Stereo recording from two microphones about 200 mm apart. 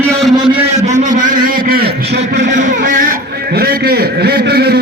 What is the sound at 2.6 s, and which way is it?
A man's voice, 40° right (ahead or behind).